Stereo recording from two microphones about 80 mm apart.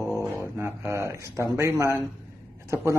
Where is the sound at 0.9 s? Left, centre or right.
Right.